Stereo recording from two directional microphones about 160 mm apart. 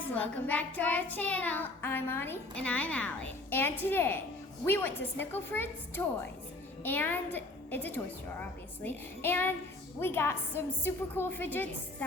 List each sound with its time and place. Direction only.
0.1 s child singing: 10° left (ahead or behind)